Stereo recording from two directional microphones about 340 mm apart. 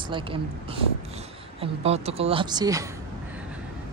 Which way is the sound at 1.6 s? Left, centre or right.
Centre.